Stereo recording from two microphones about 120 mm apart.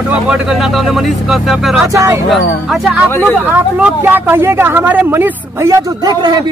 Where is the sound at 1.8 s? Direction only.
25° right (ahead or behind).